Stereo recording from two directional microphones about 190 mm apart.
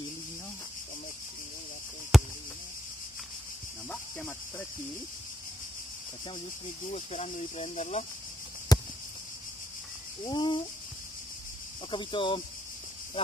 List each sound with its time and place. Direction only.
2.1 s basketball bounce: centre (ahead or behind)
3.9 s speech: 10° left (ahead or behind)
6.9 s speech: 35° left (ahead or behind)
8.7 s a sound: 20° left (ahead or behind)
10.2 s speech: 25° left (ahead or behind)
11.9 s speech: 25° left (ahead or behind)